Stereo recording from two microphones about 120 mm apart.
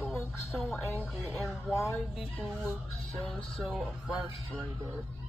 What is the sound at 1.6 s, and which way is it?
Speech, 25° left (ahead or behind).